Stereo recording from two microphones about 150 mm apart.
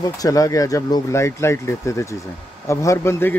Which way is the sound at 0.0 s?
25° left (ahead or behind).